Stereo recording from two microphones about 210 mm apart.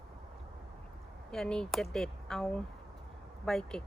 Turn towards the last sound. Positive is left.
turn(degrees=0)  # may be behind; listen again after turning